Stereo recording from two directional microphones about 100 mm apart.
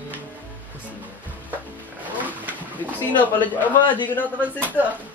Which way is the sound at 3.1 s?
15° left (ahead or behind).